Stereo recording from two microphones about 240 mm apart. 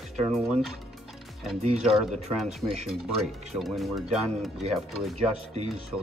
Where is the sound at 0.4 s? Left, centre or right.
Centre.